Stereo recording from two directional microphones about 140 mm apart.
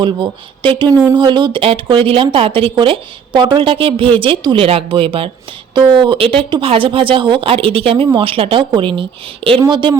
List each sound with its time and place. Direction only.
0.0 s a woman's voice: 35° right (ahead or behind)